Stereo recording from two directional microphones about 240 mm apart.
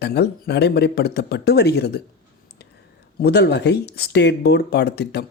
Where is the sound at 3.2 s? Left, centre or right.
Left.